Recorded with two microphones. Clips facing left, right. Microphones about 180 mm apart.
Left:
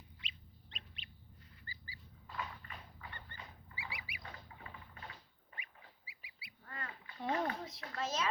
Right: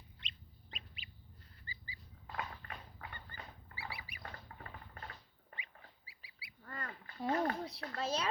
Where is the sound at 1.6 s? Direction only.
15° right (ahead or behind).